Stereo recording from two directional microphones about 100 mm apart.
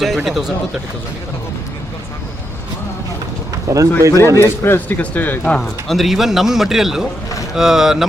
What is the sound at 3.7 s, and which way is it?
Speech, 30° right (ahead or behind).